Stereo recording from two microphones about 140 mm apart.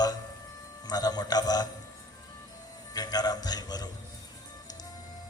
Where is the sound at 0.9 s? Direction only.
30° left (ahead or behind).